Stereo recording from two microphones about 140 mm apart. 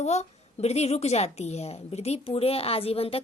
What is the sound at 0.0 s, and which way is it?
A woman's voice, 50° left (ahead or behind).